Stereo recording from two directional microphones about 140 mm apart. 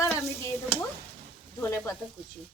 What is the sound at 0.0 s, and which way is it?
Stir, 20° left (ahead or behind).